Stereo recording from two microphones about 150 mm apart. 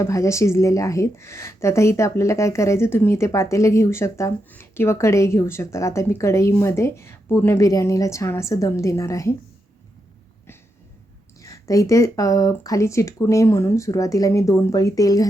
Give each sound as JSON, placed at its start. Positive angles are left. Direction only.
{"t": 0.0, "sound": "a woman's voice", "side_deg": 20}
{"t": 11.3, "sound": "a woman's voice", "side_deg": 20}